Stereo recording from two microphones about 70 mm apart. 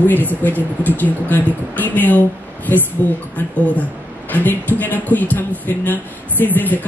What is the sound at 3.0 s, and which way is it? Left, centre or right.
Speech, right.